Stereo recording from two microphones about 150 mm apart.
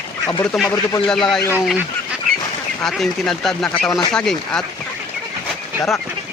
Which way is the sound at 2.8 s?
Centre (ahead or behind).